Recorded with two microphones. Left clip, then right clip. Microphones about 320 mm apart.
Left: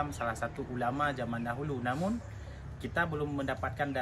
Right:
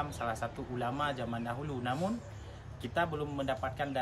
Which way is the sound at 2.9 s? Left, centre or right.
Centre.